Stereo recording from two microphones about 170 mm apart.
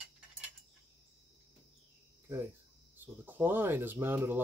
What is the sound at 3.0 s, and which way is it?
Speech, 10° right (ahead or behind).